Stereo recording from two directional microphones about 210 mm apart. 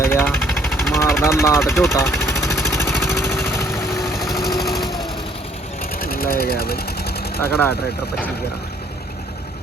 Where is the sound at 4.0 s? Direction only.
Centre (ahead or behind).